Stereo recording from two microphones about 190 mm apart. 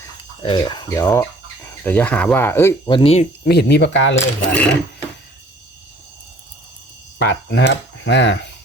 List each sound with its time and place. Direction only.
0.4 s speech: 25° left (ahead or behind)
2.9 s speech: 30° left (ahead or behind)
3.4 s speech: 60° left (ahead or behind)
4.1 s speech: 5° left (ahead or behind)
7.2 s speech: 65° left (ahead or behind)